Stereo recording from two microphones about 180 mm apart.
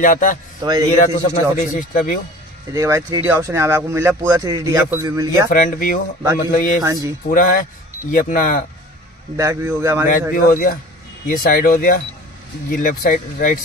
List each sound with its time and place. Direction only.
0.0 s speech: 45° left (ahead or behind)
0.6 s speech: 25° right (ahead or behind)
0.9 s speech: 45° left (ahead or behind)
2.7 s speech: 15° right (ahead or behind)
5.5 s speech: 50° left (ahead or behind)
6.8 s speech: 15° right (ahead or behind)
7.2 s speech: 50° left (ahead or behind)
9.4 s speech: 15° right (ahead or behind)
10.3 s speech: 50° left (ahead or behind)